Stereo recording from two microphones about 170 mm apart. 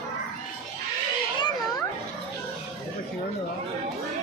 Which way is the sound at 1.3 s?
25° left (ahead or behind).